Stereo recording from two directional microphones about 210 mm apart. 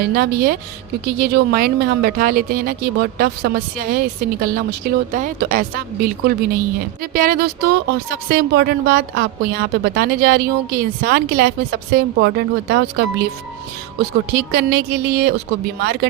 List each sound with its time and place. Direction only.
0.0 s speech: 45° right (ahead or behind)
14.0 s speech: 50° right (ahead or behind)